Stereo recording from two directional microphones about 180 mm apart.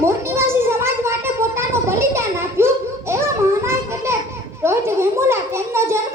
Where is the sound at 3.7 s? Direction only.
15° right (ahead or behind).